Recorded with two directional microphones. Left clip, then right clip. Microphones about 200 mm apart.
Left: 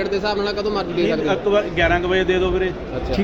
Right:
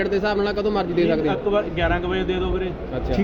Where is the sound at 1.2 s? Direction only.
5° left (ahead or behind).